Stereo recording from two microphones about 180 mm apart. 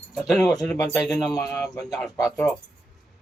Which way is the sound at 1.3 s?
20° left (ahead or behind).